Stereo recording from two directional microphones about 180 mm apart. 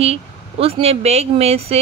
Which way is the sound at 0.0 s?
35° right (ahead or behind).